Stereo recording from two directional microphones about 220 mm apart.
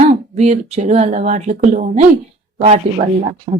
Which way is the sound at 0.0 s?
30° right (ahead or behind).